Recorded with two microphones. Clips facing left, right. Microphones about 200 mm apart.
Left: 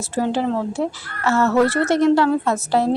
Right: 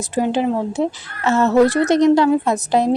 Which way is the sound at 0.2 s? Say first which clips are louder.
Right 2 dB; 15° right (ahead or behind).